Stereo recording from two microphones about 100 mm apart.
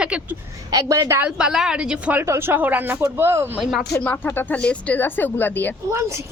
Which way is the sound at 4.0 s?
20° left (ahead or behind).